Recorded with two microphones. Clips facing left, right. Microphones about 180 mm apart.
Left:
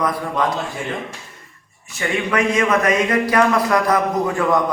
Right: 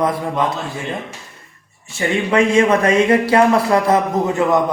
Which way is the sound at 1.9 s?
25° right (ahead or behind).